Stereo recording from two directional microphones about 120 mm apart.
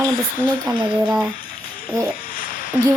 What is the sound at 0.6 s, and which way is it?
Speech, 40° right (ahead or behind).